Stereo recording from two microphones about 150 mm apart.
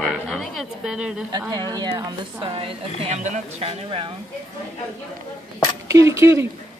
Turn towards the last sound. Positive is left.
turn(degrees=-20)  # may be behind; listen again after turning